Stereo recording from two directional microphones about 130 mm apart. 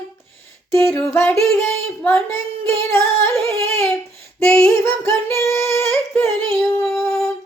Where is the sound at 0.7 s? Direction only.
20° left (ahead or behind).